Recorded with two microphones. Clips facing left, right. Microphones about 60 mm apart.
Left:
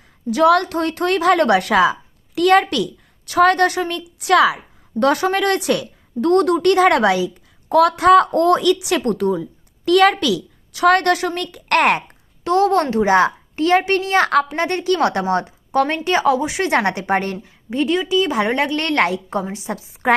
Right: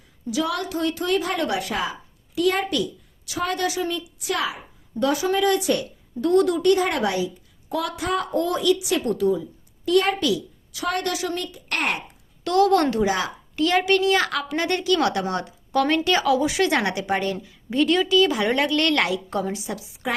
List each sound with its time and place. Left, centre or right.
0.3 s a woman's voice: left
7.7 s a woman's voice: left
10.7 s a woman's voice: left
12.5 s a woman's voice: left
13.1 s a woman's voice: left
17.7 s a woman's voice: left